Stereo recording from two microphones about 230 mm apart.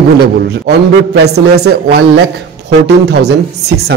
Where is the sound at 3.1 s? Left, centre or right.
Right.